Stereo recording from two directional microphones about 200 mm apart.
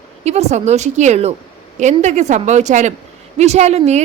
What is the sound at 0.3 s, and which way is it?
Speech, 35° right (ahead or behind).